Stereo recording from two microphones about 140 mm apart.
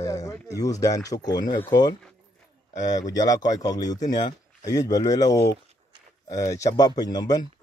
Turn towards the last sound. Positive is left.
turn(degrees=30)  # may be behind; listen again after turning